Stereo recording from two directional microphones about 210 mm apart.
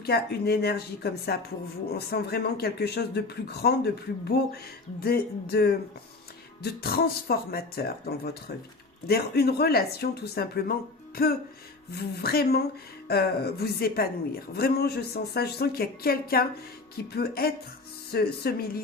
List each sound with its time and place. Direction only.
0.0 s a woman's voice: 50° left (ahead or behind)